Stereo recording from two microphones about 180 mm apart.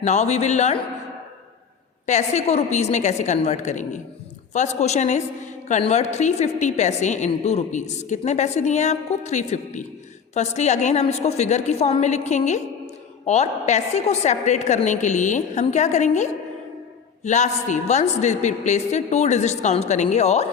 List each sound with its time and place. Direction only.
0.0 s a woman's voice: 40° left (ahead or behind)
2.0 s a woman's voice: 40° left (ahead or behind)